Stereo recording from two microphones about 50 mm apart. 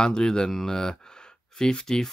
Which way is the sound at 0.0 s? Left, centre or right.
Centre.